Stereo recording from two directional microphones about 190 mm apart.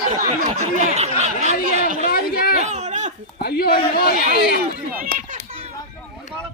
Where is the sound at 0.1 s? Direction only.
40° right (ahead or behind).